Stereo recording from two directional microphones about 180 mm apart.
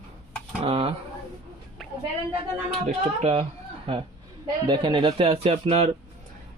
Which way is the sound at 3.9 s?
35° right (ahead or behind).